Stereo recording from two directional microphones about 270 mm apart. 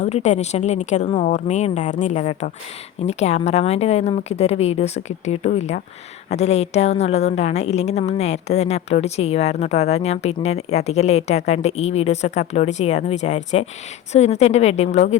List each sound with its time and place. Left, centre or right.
0.0 s a woman's voice: left